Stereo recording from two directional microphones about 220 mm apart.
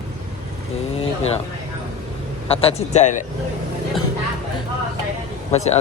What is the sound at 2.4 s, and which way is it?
Speech, 25° left (ahead or behind).